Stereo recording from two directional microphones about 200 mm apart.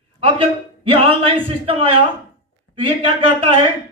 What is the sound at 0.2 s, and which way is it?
Speech, 25° right (ahead or behind).